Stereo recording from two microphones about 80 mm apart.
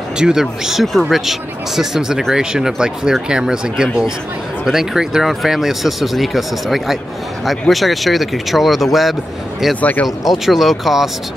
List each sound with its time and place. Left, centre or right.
0.2 s speech: centre
9.8 s speech: centre
10.4 s speech: centre